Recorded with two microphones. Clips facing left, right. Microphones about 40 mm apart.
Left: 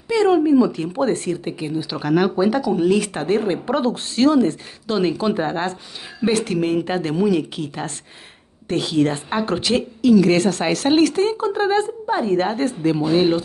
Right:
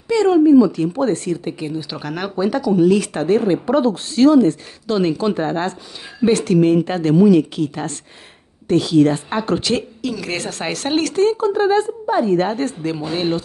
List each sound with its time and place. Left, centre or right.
0.1 s a woman's voice: centre
3.6 s speech: left
4.9 s a woman's voice: centre
8.6 s a woman's voice: left; by 13.4 s centre